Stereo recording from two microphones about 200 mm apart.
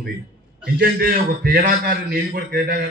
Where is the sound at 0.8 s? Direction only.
50° right (ahead or behind).